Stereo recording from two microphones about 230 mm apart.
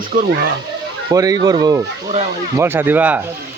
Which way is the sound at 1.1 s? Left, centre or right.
Centre.